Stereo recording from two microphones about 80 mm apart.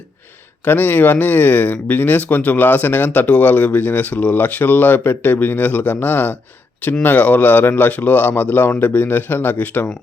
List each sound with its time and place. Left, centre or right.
0.6 s speech: left